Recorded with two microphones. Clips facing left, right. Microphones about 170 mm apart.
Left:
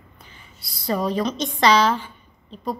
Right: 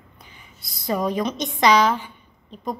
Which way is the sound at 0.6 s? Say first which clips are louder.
Even; 50° right (ahead or behind).